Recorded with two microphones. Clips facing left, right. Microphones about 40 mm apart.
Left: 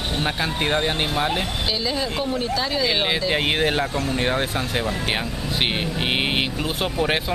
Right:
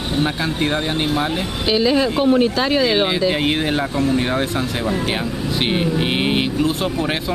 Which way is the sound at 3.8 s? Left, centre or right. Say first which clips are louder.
Right 5 dB; centre.